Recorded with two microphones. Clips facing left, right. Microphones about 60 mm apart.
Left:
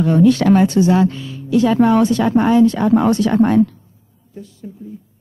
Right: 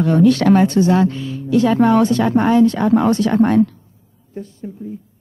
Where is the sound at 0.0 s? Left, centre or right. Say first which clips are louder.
Even; right.